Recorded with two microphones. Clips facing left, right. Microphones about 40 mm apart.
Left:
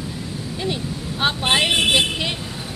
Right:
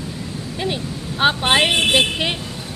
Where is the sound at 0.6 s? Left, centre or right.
Centre.